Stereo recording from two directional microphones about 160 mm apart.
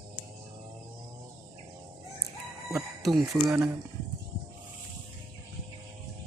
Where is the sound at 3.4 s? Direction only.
5° right (ahead or behind).